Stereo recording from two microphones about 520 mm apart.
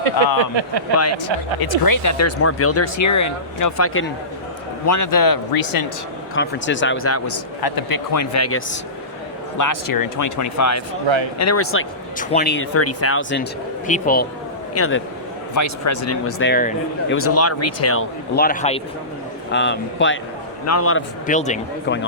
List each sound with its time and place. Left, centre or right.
0.5 s speech: right
1.6 s speech: left
4.9 s speech: left
6.3 s speech: left
7.6 s speech: left
9.6 s speech: left; by 22.0 s centre